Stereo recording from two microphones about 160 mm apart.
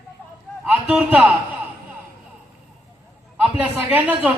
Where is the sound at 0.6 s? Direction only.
10° right (ahead or behind).